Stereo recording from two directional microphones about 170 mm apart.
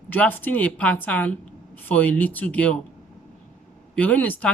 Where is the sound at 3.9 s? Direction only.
10° left (ahead or behind).